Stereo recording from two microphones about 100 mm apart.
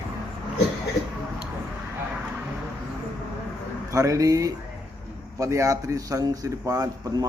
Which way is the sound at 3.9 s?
35° right (ahead or behind).